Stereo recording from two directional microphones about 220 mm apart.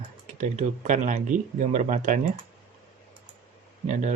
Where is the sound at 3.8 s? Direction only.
30° right (ahead or behind).